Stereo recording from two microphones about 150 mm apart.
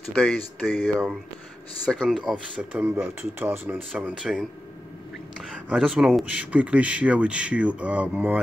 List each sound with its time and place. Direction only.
0.1 s speech: 5° left (ahead or behind)
0.8 s speech: 5° right (ahead or behind)